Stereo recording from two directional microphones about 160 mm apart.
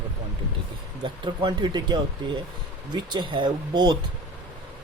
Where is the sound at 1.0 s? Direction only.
30° right (ahead or behind).